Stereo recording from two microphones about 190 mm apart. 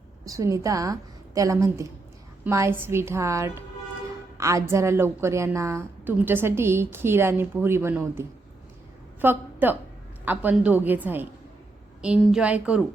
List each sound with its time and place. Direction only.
0.3 s a woman's voice: 15° right (ahead or behind)